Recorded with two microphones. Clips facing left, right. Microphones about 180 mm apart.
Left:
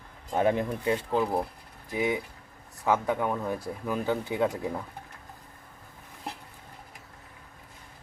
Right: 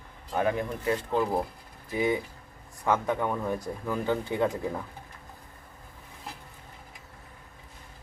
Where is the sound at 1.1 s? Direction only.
5° left (ahead or behind).